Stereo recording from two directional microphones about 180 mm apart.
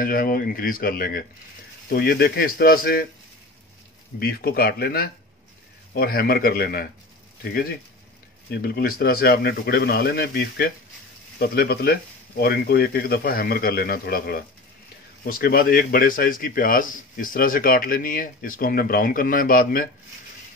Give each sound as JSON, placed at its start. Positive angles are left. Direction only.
{"t": 0.0, "sound": "speech", "side_deg": 55}
{"t": 4.2, "sound": "speech", "side_deg": 55}
{"t": 8.5, "sound": "speech", "side_deg": 60}